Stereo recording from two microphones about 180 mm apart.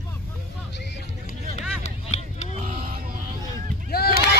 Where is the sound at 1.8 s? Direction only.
40° left (ahead or behind).